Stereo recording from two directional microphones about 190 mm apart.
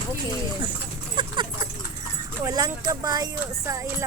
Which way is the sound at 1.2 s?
25° right (ahead or behind).